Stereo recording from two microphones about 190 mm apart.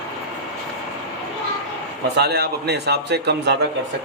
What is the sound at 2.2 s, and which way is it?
Speech, 60° right (ahead or behind).